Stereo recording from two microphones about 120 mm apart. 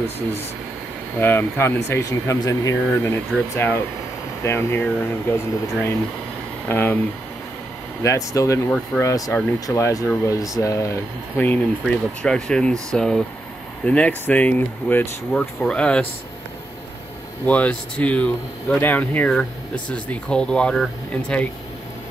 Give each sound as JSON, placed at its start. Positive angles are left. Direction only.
{"t": 1.2, "sound": "speech", "side_deg": 20}
{"t": 8.0, "sound": "speech", "side_deg": 25}
{"t": 8.6, "sound": "speech", "side_deg": 10}
{"t": 9.0, "sound": "speech", "side_deg": 25}
{"t": 17.5, "sound": "speech", "side_deg": 10}